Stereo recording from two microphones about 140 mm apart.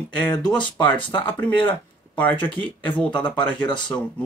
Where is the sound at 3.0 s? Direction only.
35° left (ahead or behind).